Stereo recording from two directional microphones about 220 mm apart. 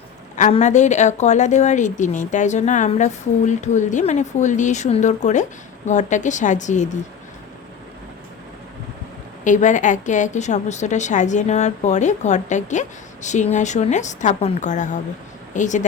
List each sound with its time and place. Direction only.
0.3 s a woman's voice: 35° left (ahead or behind)
9.4 s a woman's voice: 35° left (ahead or behind)